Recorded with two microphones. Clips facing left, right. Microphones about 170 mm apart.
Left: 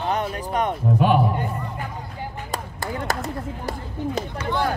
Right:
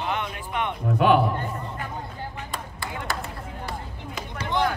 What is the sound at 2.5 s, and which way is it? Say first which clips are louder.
Speech: left 5 dB; 40° left (ahead or behind).